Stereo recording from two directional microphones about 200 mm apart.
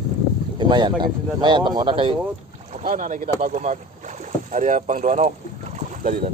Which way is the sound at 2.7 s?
40° right (ahead or behind).